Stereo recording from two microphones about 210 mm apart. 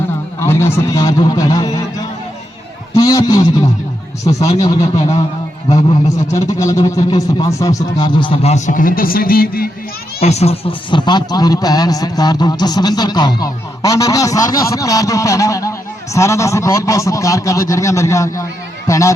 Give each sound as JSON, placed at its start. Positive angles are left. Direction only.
{"t": 0.3, "sound": "a man's voice", "side_deg": 10}
{"t": 2.9, "sound": "a man's voice", "side_deg": 15}
{"t": 4.4, "sound": "a man's voice", "side_deg": 30}
{"t": 6.3, "sound": "speech", "side_deg": 15}
{"t": 10.2, "sound": "a man's voice", "side_deg": 30}